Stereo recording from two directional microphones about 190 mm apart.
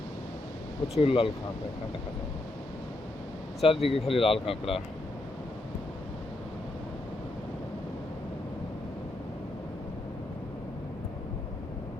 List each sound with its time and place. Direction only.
0.9 s speech: 30° left (ahead or behind)
3.6 s speech: 30° left (ahead or behind)